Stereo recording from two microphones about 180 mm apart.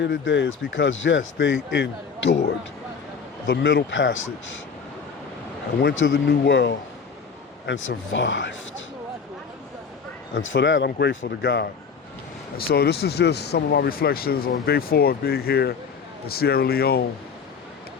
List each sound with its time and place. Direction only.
0.0 s speech: 85° left
1.7 s speech: 75° left (ahead or behind)
3.4 s speech: 80° left
5.8 s speech: 90° left; by 6.7 s 65° left (ahead or behind)
7.7 s speech: 90° left
10.3 s speech: 90° left; by 11.7 s 75° left (ahead or behind)
12.5 s speech: 60° left (ahead or behind)